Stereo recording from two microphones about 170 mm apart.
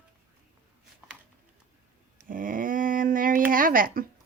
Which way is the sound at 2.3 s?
55° right (ahead or behind).